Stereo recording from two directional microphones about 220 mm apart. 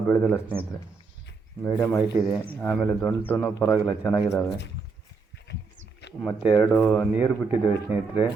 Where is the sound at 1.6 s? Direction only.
10° left (ahead or behind).